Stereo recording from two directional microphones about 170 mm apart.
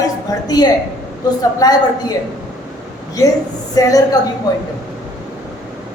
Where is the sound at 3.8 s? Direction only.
20° left (ahead or behind).